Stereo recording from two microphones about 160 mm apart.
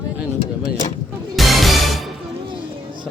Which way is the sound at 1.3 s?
Centre (ahead or behind).